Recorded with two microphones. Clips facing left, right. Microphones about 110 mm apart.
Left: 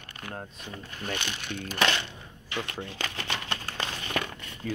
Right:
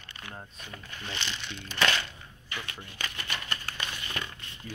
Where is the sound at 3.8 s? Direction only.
35° left (ahead or behind).